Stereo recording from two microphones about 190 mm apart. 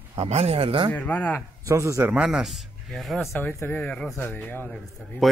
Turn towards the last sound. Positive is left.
turn(degrees=5)  # may be behind; listen again after turning